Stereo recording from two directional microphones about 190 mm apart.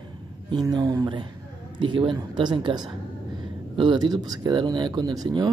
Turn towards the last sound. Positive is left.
turn(degrees=-20)  # may be behind; listen again after turning